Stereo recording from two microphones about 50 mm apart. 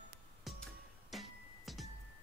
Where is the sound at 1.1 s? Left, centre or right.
Centre.